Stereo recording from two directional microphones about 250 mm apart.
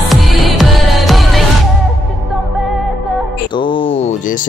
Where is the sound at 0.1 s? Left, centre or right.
Centre.